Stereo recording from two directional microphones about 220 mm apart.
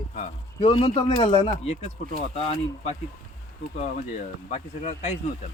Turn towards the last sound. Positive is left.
turn(degrees=30)  # may be behind; listen again after turning